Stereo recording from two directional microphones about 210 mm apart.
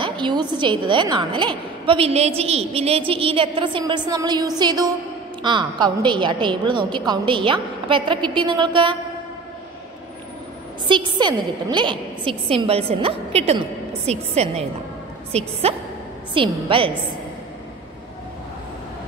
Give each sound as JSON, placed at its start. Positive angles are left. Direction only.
{"t": 0.0, "sound": "a woman's voice", "side_deg": -20}
{"t": 10.9, "sound": "a woman's voice", "side_deg": -20}